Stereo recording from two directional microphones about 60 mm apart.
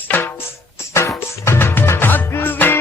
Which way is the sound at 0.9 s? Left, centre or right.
Left.